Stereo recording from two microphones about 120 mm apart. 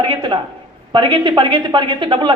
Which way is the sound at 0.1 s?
40° right (ahead or behind).